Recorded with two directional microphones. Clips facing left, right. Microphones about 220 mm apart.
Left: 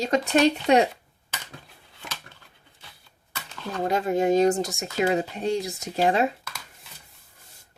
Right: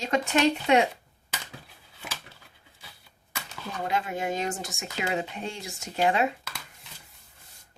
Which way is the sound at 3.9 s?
40° left (ahead or behind).